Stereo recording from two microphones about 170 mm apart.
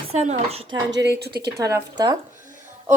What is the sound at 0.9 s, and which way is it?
Speech, 80° right.